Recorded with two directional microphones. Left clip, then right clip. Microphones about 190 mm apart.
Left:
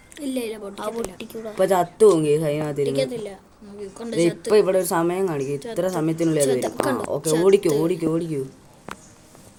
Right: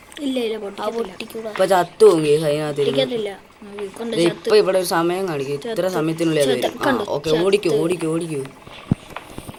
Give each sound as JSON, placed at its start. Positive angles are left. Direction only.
{"t": 0.2, "sound": "speech", "side_deg": -15}
{"t": 0.8, "sound": "speech", "side_deg": 0}
{"t": 1.5, "sound": "speech", "side_deg": 25}
{"t": 2.8, "sound": "a woman's voice", "side_deg": -20}
{"t": 4.4, "sound": "speech", "side_deg": 30}
{"t": 6.4, "sound": "speech", "side_deg": -15}
{"t": 7.4, "sound": "speech", "side_deg": 35}